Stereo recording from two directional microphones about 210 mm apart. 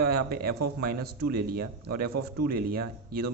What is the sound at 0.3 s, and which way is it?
Speech, 45° right (ahead or behind).